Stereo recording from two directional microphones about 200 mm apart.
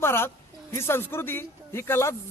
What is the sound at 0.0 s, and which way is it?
A man's voice, 10° left (ahead or behind).